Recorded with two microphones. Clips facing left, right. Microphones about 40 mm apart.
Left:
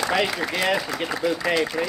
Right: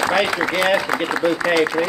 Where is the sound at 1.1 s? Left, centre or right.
Right.